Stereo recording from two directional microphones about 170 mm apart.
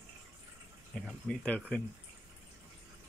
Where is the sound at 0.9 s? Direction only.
5° left (ahead or behind).